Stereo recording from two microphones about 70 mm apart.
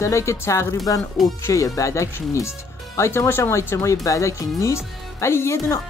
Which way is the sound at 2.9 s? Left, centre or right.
Left.